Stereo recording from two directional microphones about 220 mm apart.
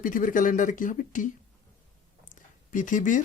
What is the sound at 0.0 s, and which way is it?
Speech, 40° left (ahead or behind).